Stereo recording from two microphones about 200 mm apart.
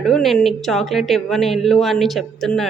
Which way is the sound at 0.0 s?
Centre (ahead or behind).